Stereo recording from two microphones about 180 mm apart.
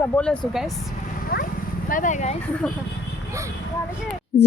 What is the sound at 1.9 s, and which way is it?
Speech, 45° left (ahead or behind).